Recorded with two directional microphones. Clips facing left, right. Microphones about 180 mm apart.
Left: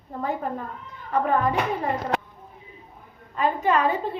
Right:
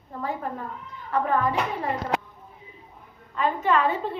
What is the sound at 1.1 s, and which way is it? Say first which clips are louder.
Speech: left 2 dB; 20° left (ahead or behind).